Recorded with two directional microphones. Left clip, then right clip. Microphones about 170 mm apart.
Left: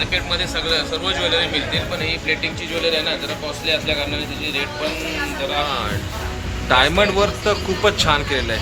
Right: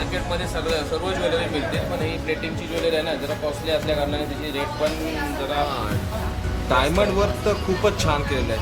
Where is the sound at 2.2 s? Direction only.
50° right (ahead or behind).